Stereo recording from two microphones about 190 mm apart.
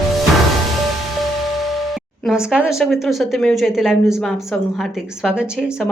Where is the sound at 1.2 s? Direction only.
Centre (ahead or behind).